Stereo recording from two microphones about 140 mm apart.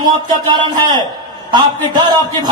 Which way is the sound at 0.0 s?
30° right (ahead or behind).